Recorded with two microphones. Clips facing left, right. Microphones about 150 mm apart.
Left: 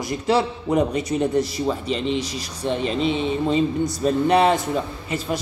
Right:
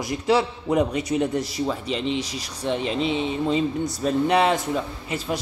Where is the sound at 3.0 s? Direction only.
55° left (ahead or behind).